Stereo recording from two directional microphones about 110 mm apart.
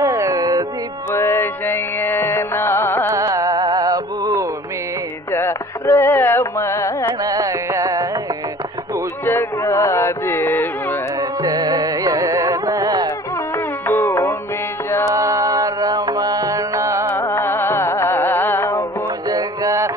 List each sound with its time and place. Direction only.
0.0 s music: 30° right (ahead or behind)
1.1 s music: 25° left (ahead or behind)
3.1 s music: 30° right (ahead or behind)
5.3 s carnatic music: 25° left (ahead or behind)
7.2 s carnatic music: 30° right (ahead or behind)
9.2 s a sound: 25° left (ahead or behind)
11.1 s carnatic music: 35° right (ahead or behind)
13.6 s music: 25° left (ahead or behind)
14.9 s mantra: 25° left (ahead or behind)
15.1 s music: 30° right (ahead or behind)
17.2 s music: 25° left (ahead or behind)
19.2 s music: 35° right (ahead or behind)